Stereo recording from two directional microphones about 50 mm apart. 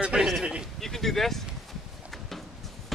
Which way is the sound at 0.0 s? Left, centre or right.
Centre.